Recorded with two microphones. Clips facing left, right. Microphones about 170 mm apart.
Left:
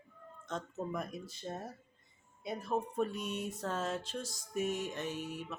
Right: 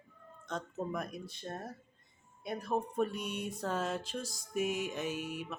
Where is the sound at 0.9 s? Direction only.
Centre (ahead or behind).